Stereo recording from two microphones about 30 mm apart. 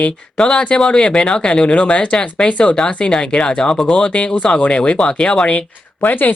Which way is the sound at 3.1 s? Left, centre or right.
Left.